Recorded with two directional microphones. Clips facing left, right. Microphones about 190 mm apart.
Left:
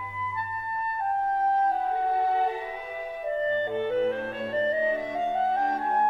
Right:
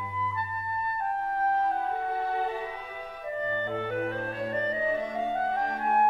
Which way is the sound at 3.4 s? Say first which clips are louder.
Left 4 dB; 20° left (ahead or behind).